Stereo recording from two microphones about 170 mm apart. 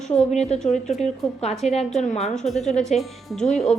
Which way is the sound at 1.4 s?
40° left (ahead or behind).